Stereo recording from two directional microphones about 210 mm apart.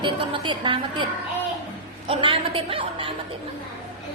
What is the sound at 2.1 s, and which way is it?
A woman's voice, 25° right (ahead or behind).